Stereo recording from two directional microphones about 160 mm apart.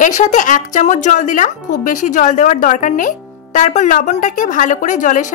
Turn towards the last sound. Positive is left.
turn(degrees=50)  # may be behind; listen again after turning